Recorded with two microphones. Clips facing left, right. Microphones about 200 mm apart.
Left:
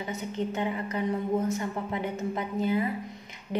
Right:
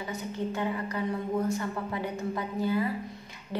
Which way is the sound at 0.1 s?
20° left (ahead or behind).